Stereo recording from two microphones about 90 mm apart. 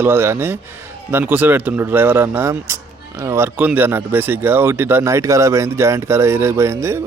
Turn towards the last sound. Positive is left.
turn(degrees=-30)  # may be behind; listen again after turning